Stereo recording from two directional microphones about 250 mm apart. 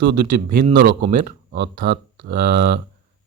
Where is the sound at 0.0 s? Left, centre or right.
Right.